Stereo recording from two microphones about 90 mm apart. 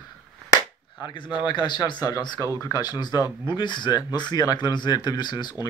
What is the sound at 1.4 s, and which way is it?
Speech, 55° left (ahead or behind).